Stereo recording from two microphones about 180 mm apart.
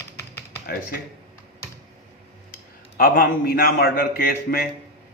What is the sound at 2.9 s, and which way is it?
A man's voice, 55° left (ahead or behind).